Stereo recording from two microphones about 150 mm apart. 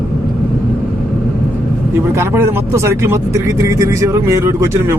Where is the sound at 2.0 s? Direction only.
15° right (ahead or behind).